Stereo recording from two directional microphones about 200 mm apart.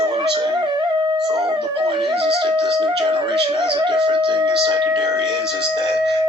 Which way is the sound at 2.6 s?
20° right (ahead or behind).